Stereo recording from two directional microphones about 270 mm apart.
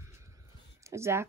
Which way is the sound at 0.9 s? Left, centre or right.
Centre.